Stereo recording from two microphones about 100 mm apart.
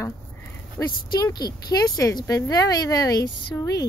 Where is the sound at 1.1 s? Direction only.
40° left (ahead or behind).